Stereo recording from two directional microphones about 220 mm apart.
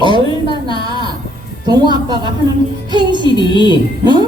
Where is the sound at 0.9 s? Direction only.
20° right (ahead or behind).